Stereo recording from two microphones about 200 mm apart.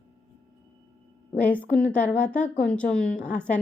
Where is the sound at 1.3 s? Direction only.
10° left (ahead or behind).